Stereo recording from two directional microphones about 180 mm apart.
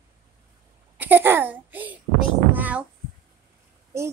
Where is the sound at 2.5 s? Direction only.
10° right (ahead or behind).